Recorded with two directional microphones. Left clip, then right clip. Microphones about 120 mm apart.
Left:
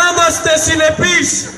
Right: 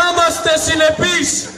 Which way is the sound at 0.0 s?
35° left (ahead or behind).